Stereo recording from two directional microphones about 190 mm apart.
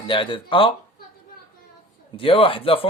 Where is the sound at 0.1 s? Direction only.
25° left (ahead or behind).